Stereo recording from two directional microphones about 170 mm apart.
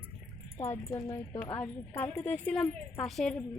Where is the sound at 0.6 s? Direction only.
15° left (ahead or behind).